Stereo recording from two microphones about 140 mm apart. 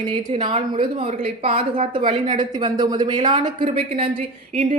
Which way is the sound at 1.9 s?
35° right (ahead or behind).